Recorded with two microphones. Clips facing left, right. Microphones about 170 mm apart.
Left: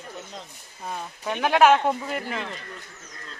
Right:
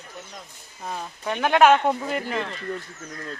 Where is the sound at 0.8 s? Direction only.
5° left (ahead or behind).